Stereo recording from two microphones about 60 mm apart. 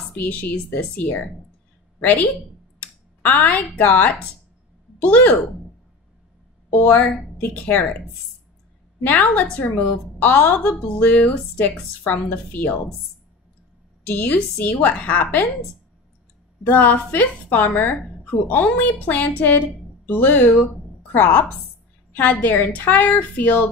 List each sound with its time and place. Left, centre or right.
0.1 s a woman's voice: left
6.7 s a woman's voice: left
9.0 s a woman's voice: left
14.2 s a woman's voice: left
16.6 s a woman's voice: left